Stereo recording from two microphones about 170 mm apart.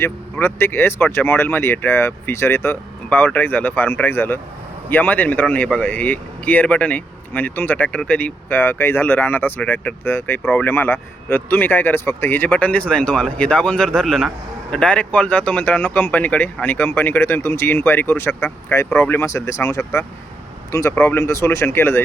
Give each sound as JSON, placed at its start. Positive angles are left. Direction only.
{"t": 0.0, "sound": "speech", "side_deg": 15}